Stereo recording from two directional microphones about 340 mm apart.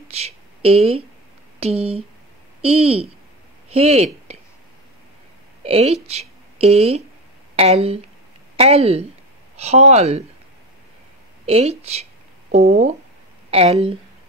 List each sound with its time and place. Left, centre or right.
0.1 s speech: centre
5.6 s a woman's voice: centre
11.4 s speech: centre